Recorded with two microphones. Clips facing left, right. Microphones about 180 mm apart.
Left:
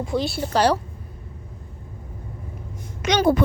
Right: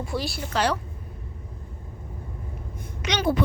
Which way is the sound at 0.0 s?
20° left (ahead or behind).